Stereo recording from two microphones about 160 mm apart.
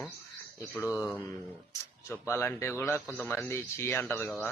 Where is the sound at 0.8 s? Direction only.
15° left (ahead or behind).